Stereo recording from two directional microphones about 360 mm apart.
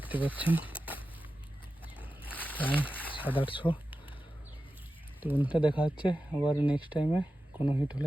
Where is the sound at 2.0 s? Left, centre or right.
Centre.